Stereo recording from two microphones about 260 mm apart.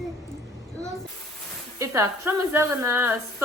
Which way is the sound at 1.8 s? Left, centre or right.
Centre.